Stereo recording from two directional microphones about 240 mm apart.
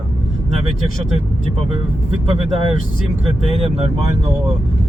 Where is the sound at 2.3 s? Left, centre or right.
Right.